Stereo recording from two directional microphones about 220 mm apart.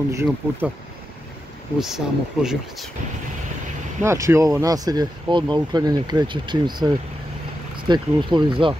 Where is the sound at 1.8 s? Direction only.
Centre (ahead or behind).